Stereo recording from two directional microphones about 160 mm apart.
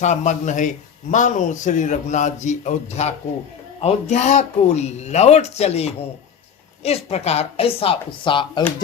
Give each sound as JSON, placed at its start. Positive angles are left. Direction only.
{"t": 0.0, "sound": "speech", "side_deg": 50}